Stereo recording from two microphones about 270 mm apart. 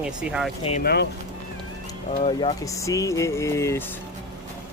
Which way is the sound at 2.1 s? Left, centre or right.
Left.